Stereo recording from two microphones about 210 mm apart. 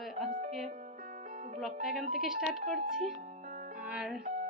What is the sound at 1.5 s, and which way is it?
A woman's voice, centre (ahead or behind).